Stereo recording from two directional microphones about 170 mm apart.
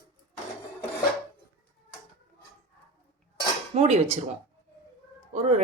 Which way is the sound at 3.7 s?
40° right (ahead or behind).